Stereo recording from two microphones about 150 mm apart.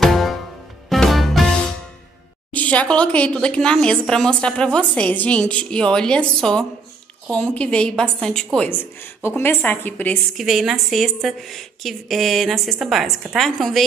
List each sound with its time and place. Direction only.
0.0 s music: centre (ahead or behind)
2.5 s speech: 10° left (ahead or behind)
10.3 s a woman's voice: centre (ahead or behind)